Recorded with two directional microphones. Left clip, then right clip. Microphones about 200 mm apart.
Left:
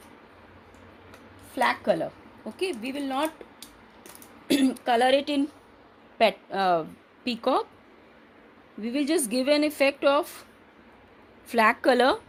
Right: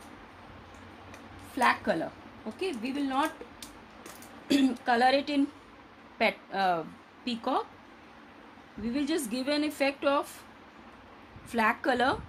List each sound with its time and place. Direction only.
1.5 s speech: 40° left (ahead or behind)
2.6 s speech: 55° left (ahead or behind)
4.4 s speech: 45° left (ahead or behind)
8.8 s speech: 40° left (ahead or behind)
11.4 s speech: 40° left (ahead or behind)